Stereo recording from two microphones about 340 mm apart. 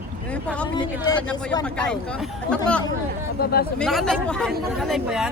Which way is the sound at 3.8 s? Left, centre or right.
Centre.